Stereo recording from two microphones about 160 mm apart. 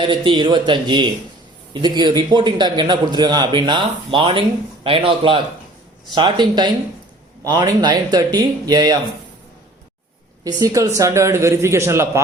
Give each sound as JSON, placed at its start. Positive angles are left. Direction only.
{"t": 0.0, "sound": "a man's voice", "side_deg": -30}
{"t": 10.4, "sound": "a man's voice", "side_deg": -20}